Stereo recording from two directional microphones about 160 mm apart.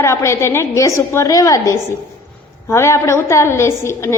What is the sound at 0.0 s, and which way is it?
A woman's voice, 15° left (ahead or behind).